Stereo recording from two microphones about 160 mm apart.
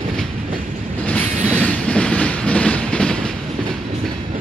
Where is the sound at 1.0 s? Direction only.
5° left (ahead or behind).